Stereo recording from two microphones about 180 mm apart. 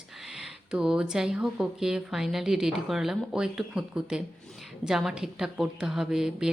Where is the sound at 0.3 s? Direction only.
5° right (ahead or behind).